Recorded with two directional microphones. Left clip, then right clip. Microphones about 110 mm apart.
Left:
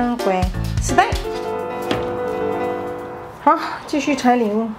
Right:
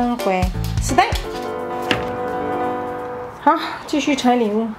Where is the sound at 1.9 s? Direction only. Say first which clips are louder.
Right 2 dB; 15° right (ahead or behind).